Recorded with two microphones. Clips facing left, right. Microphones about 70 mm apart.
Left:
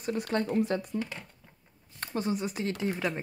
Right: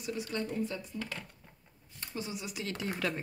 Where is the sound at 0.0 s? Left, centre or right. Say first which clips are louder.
Left 5 dB; left.